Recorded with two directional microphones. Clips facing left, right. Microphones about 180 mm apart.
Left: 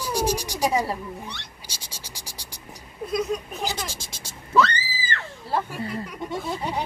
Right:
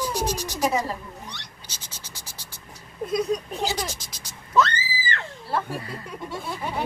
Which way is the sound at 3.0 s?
30° right (ahead or behind).